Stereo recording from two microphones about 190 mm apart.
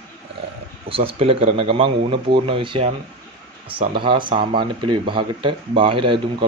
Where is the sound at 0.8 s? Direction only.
30° right (ahead or behind).